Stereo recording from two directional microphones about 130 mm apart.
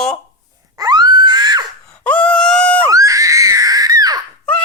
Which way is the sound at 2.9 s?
25° right (ahead or behind).